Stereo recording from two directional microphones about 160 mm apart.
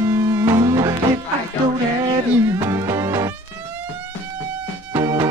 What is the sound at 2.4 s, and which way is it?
Music, 20° right (ahead or behind).